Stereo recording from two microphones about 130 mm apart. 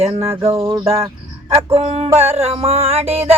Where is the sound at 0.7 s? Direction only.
45° right (ahead or behind).